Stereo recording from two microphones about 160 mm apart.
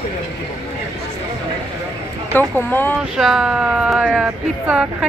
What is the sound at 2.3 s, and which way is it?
Speech, 10° left (ahead or behind).